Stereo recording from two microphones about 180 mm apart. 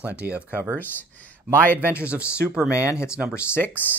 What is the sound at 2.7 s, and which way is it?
Speech, 15° left (ahead or behind).